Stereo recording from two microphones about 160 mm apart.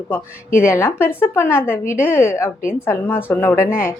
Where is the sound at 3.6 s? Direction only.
60° left (ahead or behind).